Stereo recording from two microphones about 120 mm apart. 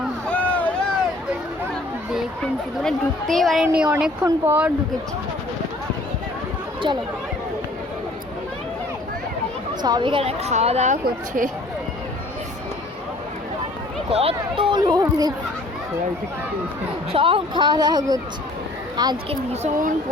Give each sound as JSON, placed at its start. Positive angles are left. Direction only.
{"t": 0.3, "sound": "a sound", "side_deg": 10}
{"t": 2.4, "sound": "speech", "side_deg": 5}
{"t": 6.9, "sound": "speech", "side_deg": -40}
{"t": 9.8, "sound": "a woman's voice", "side_deg": -40}
{"t": 14.1, "sound": "speech", "side_deg": -55}
{"t": 17.1, "sound": "speech", "side_deg": -50}
{"t": 19.3, "sound": "speech", "side_deg": -70}